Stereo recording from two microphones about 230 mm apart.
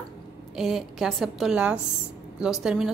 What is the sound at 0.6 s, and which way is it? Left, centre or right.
A woman's voice, centre.